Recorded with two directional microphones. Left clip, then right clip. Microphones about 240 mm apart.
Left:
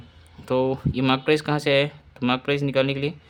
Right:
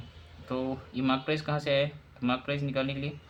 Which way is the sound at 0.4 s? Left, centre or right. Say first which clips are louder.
Left 11 dB; left.